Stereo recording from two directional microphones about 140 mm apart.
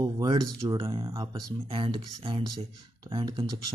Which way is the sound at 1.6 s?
40° right (ahead or behind).